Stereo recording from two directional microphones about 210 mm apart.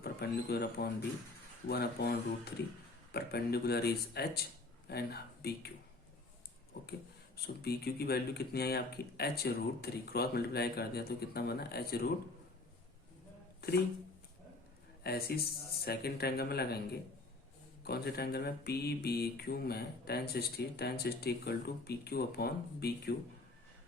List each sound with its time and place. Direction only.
0.0 s speech: 50° left (ahead or behind)
1.6 s mantra: 50° left (ahead or behind)
7.4 s mantra: 50° left (ahead or behind)
13.6 s speech: 50° left (ahead or behind)
15.0 s mantra: 45° left (ahead or behind)